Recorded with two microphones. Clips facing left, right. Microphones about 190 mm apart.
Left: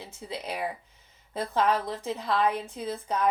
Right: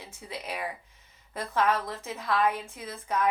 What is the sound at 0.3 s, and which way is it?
Speech, 25° left (ahead or behind).